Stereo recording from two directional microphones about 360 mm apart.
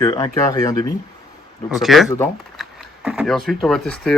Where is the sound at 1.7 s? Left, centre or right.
Centre.